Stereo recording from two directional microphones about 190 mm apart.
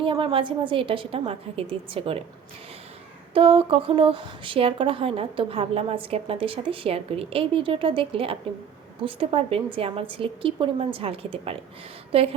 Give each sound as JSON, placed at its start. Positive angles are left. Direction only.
{"t": 0.0, "sound": "a woman's voice", "side_deg": -25}
{"t": 3.3, "sound": "a woman's voice", "side_deg": -30}